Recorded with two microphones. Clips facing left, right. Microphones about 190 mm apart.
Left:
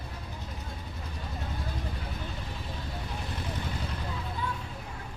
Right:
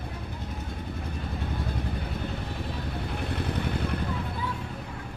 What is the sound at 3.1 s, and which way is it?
Vehicle, 60° right (ahead or behind).